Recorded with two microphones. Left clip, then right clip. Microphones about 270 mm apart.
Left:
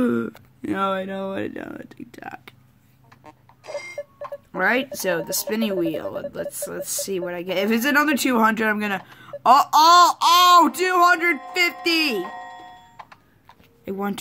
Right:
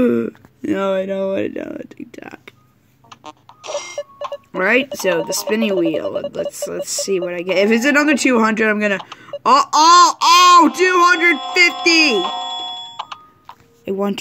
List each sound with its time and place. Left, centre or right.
0.0 s speech: centre
4.5 s speech: centre
12.2 s music: right
13.8 s speech: centre